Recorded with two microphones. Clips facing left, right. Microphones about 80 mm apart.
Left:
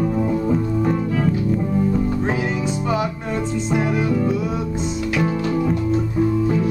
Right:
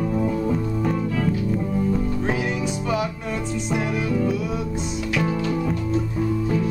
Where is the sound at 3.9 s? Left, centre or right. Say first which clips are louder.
Left 3 dB; centre.